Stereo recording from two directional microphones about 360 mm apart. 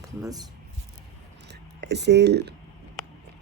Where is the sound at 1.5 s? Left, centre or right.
Right.